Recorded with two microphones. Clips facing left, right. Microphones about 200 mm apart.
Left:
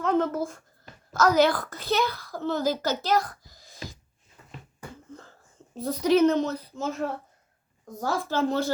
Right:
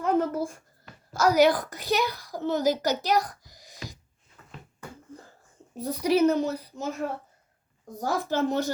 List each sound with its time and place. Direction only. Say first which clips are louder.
0.0 s a woman's voice: even; 10° right (ahead or behind)
4.4 s a sound: even; 15° left (ahead or behind)
5.7 s a woman's voice: left 2 dB; 10° right (ahead or behind)
7.9 s a woman's voice: even; 15° right (ahead or behind)